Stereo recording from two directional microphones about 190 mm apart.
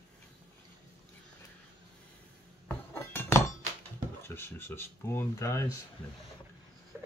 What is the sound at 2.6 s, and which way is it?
Chink, 10° left (ahead or behind).